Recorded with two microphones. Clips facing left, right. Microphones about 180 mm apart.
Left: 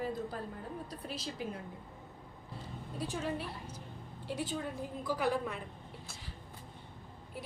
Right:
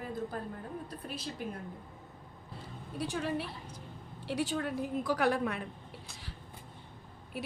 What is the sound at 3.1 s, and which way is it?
A woman's voice, 75° right (ahead or behind).